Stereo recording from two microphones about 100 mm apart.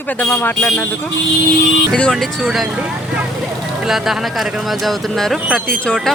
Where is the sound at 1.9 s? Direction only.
5° left (ahead or behind).